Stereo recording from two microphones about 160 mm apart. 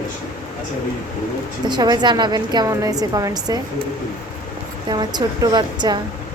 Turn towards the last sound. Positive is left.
turn(degrees=-25)  # may be behind; listen again after turning